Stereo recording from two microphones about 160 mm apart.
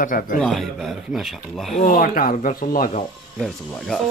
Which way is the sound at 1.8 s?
60° left (ahead or behind).